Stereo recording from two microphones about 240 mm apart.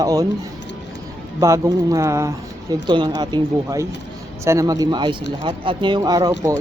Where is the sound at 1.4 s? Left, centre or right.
Centre.